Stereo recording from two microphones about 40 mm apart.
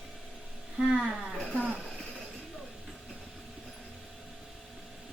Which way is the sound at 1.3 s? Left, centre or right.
Left.